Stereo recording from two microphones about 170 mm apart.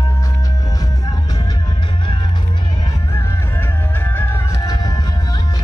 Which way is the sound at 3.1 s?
10° left (ahead or behind).